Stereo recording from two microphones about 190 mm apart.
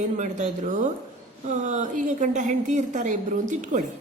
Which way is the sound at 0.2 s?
40° right (ahead or behind).